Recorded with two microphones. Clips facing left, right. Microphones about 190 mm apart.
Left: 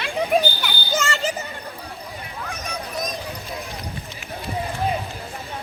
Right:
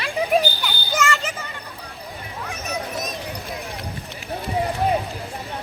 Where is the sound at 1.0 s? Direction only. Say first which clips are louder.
Right 4 dB; 35° left (ahead or behind).